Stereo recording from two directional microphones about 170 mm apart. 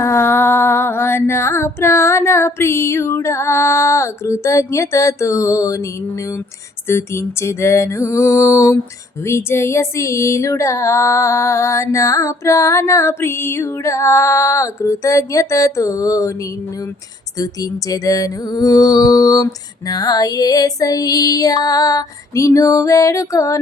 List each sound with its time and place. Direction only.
0.0 s female singing: 15° left (ahead or behind)
6.8 s female singing: 15° left (ahead or behind)
17.3 s female singing: 20° left (ahead or behind)